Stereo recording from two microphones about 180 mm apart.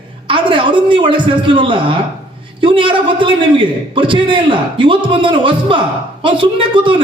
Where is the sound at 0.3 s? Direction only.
25° right (ahead or behind).